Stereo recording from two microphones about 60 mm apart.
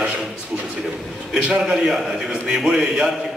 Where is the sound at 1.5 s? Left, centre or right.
Centre.